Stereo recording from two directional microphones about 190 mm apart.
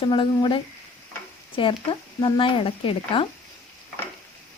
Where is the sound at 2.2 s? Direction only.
25° left (ahead or behind).